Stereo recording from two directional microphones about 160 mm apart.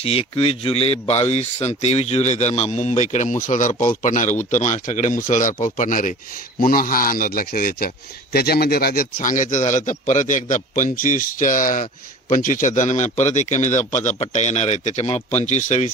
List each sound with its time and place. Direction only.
0.0 s a man's voice: 35° left (ahead or behind)